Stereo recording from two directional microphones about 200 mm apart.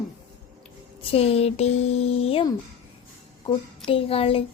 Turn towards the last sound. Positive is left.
turn(degrees=30)  # may be behind; listen again after turning